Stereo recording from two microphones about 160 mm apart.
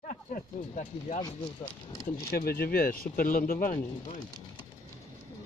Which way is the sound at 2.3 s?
70° left (ahead or behind).